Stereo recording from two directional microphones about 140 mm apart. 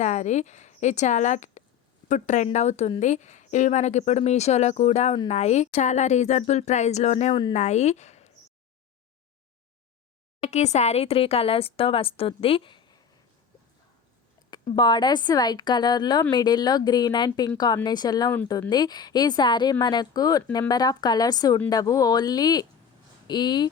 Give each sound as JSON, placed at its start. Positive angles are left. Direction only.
{"t": 0.0, "sound": "speech", "side_deg": 60}
{"t": 10.4, "sound": "speech", "side_deg": 50}
{"t": 14.8, "sound": "a woman's voice", "side_deg": 30}